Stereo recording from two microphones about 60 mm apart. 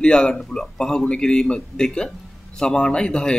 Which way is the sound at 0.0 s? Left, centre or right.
Centre.